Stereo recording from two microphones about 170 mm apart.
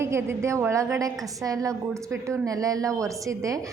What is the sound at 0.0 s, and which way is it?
A woman's voice, 15° right (ahead or behind).